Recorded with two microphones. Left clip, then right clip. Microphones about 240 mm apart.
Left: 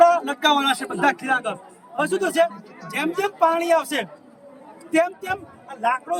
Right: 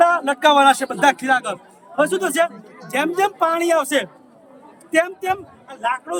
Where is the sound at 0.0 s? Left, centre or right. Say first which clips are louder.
Right 1 dB; centre.